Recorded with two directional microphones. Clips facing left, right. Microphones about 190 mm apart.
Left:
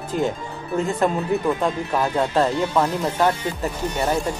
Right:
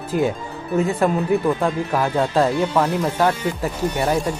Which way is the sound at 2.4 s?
10° right (ahead or behind).